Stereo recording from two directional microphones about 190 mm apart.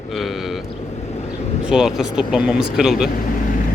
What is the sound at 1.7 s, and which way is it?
Speech, centre (ahead or behind).